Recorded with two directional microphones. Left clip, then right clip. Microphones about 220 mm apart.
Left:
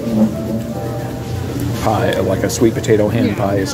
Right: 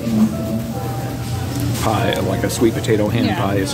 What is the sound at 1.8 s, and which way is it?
Speech, 10° right (ahead or behind).